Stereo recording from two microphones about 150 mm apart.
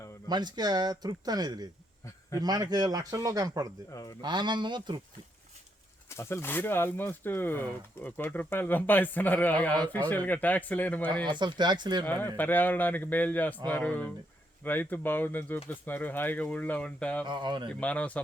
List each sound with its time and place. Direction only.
0.3 s speech: 30° right (ahead or behind)
6.1 s speech: 15° left (ahead or behind)
11.3 s speech: 30° right (ahead or behind)
12.0 s speech: 10° left (ahead or behind)
17.2 s speech: 30° right (ahead or behind)
17.7 s speech: 10° left (ahead or behind)